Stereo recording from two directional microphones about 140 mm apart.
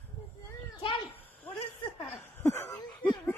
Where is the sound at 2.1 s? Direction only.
20° left (ahead or behind).